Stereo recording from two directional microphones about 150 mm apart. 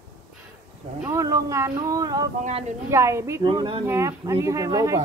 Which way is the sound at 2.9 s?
20° right (ahead or behind).